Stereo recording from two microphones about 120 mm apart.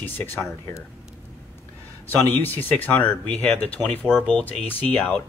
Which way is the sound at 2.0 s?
15° left (ahead or behind).